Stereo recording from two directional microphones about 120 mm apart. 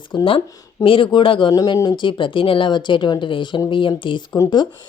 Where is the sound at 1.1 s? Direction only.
45° left (ahead or behind).